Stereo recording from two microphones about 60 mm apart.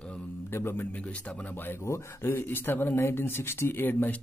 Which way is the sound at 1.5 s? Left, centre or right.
Left.